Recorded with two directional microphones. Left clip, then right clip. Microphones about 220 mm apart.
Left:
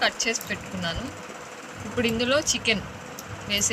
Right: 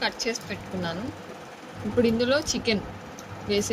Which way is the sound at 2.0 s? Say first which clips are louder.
Left 2 dB; centre (ahead or behind).